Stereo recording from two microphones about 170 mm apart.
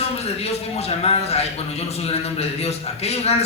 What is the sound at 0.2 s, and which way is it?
A man's voice, 40° left (ahead or behind).